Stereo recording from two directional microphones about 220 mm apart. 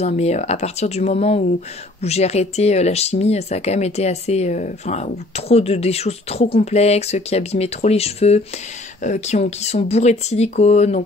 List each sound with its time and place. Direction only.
0.0 s speech: 30° left (ahead or behind)